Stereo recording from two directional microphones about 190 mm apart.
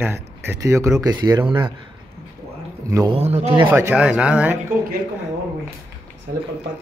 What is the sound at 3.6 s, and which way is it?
Speech, 10° right (ahead or behind).